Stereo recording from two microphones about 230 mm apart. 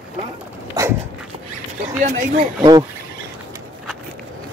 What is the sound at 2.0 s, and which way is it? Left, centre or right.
Speech, right.